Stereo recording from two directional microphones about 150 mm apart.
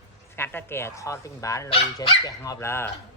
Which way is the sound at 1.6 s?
35° left (ahead or behind).